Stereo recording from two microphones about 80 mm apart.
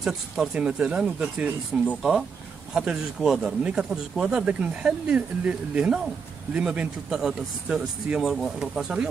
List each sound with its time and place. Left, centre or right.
0.0 s speech: centre
7.1 s speech: centre